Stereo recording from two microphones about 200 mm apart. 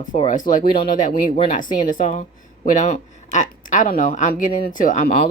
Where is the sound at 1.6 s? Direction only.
40° left (ahead or behind).